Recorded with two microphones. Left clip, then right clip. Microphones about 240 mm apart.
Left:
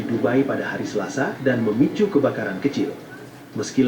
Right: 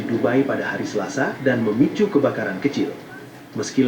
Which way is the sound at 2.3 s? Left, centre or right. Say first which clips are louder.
Right 1 dB; centre.